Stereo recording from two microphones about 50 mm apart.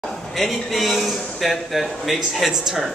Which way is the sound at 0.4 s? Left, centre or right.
Centre.